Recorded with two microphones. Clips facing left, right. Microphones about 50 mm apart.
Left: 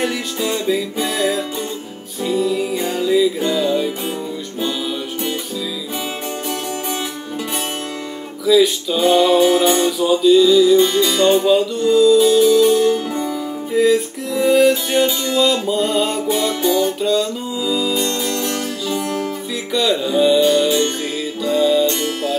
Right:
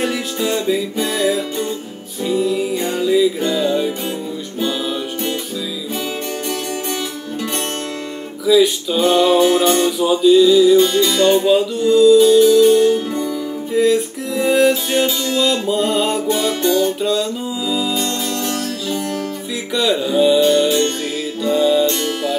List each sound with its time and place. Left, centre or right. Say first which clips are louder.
0.0 s music: right 1 dB; centre
8.5 s music: even; centre
9.8 s music: right 1 dB; centre
10.9 s music: right 1 dB; centre
11.3 s music: even; centre
13.1 s music: right 1 dB; centre
13.7 s music: even; centre